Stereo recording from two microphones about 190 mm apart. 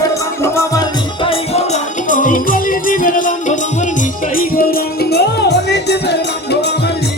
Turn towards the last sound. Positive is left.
turn(degrees=60)  # may be behind; listen again after turning